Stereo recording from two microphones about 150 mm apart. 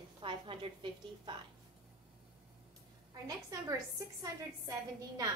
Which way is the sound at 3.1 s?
25° right (ahead or behind).